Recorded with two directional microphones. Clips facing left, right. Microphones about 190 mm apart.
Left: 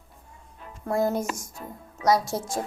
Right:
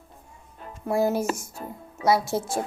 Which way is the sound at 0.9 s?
5° right (ahead or behind).